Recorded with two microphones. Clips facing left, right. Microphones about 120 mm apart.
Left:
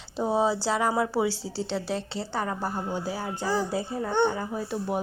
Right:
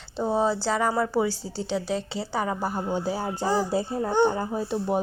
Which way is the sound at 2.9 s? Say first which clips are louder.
Right 4 dB; 25° right (ahead or behind).